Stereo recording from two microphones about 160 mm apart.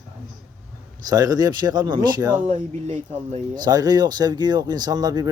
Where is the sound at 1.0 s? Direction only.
25° right (ahead or behind).